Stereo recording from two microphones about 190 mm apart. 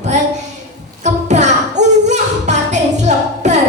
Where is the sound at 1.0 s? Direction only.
40° right (ahead or behind).